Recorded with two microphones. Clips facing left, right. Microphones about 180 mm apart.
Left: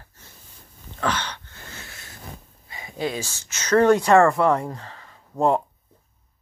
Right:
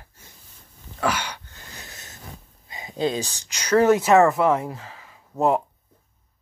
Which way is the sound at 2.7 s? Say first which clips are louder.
Right 3 dB; 20° right (ahead or behind).